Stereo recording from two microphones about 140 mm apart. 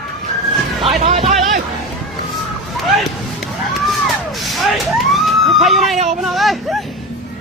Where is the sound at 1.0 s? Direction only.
50° right (ahead or behind).